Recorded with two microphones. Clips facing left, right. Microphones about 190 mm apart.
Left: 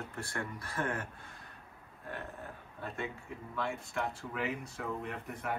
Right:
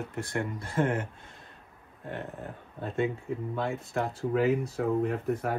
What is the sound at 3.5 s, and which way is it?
Speech, 35° right (ahead or behind).